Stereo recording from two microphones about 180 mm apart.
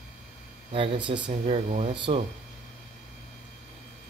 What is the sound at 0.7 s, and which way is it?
A man's voice, 30° right (ahead or behind).